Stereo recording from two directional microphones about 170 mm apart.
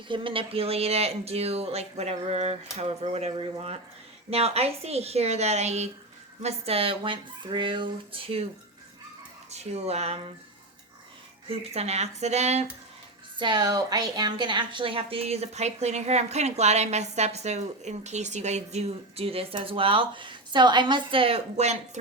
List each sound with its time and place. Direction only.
0.1 s a woman's voice: 30° right (ahead or behind)
9.5 s a woman's voice: 40° right (ahead or behind)
11.4 s a woman's voice: 35° right (ahead or behind)
13.4 s a woman's voice: 25° right (ahead or behind); by 21.8 s 40° right (ahead or behind)